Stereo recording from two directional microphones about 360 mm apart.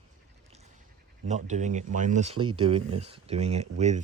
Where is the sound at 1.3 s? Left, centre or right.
Centre.